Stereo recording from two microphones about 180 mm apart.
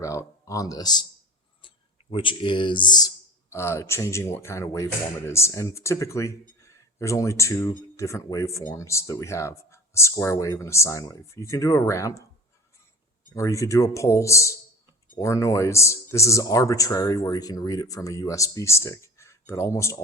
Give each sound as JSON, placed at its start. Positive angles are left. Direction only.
{"t": 0.0, "sound": "speech", "side_deg": 15}
{"t": 2.0, "sound": "speech", "side_deg": 30}
{"t": 13.3, "sound": "speech", "side_deg": 15}